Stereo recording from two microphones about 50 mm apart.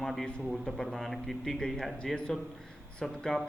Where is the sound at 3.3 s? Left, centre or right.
Centre.